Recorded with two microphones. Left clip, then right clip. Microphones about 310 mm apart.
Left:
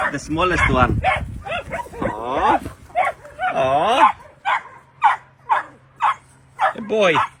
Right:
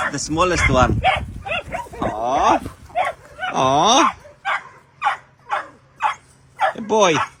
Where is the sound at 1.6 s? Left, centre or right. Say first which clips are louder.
Even; centre.